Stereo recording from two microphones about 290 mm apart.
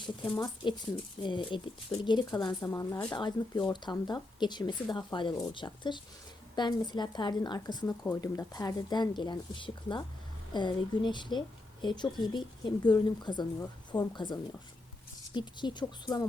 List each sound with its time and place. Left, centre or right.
0.3 s speech: centre